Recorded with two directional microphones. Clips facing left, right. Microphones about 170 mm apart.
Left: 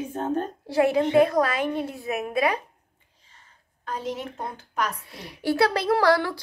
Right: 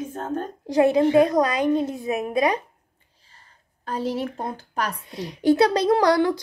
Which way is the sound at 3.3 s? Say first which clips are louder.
Right 1 dB; 35° right (ahead or behind).